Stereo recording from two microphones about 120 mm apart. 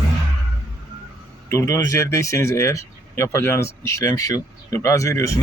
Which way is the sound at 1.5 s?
25° left (ahead or behind).